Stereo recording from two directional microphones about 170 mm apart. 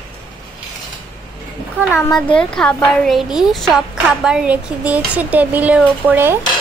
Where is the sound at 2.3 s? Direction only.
5° left (ahead or behind); by 6.3 s 10° right (ahead or behind).